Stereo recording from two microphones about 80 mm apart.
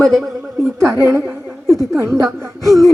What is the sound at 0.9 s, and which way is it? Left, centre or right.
Speech, right.